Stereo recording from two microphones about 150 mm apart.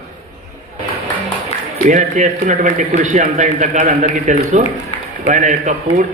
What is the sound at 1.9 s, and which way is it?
A man's voice, 55° right (ahead or behind).